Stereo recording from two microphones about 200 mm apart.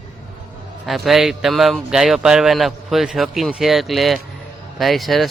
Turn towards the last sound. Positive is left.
turn(degrees=0)  # may be behind; listen again after turning